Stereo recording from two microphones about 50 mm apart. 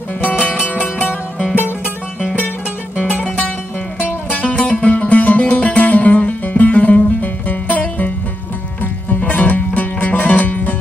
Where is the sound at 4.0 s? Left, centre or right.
Left.